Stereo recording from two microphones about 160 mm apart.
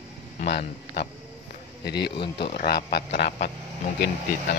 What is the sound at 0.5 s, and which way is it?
Speech, 90° left.